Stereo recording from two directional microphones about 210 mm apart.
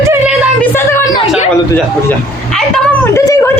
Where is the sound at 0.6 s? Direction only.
10° left (ahead or behind).